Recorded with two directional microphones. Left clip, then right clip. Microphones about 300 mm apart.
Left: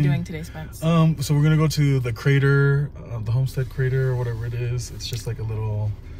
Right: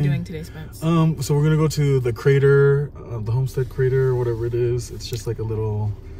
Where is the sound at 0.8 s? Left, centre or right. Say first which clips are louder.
Right 1 dB; centre.